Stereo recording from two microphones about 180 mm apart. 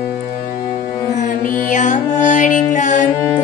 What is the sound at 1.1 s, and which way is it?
Music, 50° left (ahead or behind).